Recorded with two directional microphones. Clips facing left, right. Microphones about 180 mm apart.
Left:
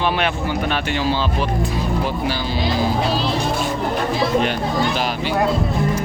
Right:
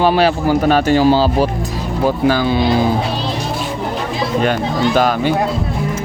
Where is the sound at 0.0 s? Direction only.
35° right (ahead or behind).